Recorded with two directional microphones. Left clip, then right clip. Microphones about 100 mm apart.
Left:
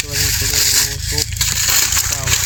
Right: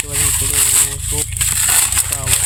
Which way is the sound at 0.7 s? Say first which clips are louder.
Left 2 dB; 35° left (ahead or behind).